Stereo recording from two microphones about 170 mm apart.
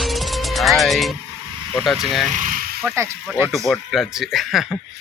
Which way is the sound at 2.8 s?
15° right (ahead or behind).